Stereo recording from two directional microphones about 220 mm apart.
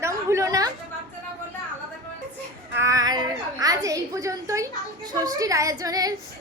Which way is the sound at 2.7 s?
15° right (ahead or behind).